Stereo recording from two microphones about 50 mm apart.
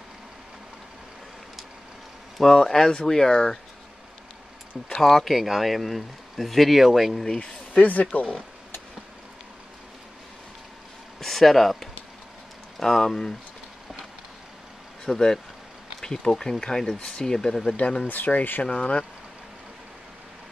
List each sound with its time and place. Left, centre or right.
2.3 s speech: centre
4.9 s speech: centre
7.3 s speech: left
11.1 s speech: centre
15.0 s speech: centre
17.7 s speech: left
18.6 s speech: left